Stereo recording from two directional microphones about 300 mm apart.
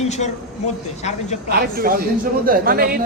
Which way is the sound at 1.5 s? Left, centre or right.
Right.